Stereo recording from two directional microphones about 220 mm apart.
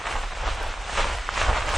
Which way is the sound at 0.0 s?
Centre (ahead or behind).